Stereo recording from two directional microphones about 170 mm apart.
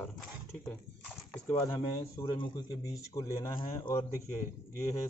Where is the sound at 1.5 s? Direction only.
20° left (ahead or behind).